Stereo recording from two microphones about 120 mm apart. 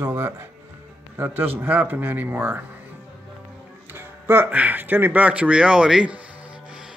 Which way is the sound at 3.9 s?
20° right (ahead or behind).